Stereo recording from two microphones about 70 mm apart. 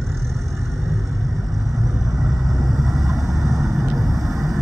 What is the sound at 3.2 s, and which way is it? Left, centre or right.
Vehicle, right.